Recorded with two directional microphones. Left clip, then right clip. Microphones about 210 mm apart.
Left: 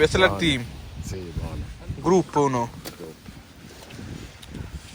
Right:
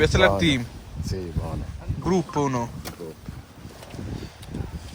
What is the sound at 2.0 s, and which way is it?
Speech, 10° right (ahead or behind).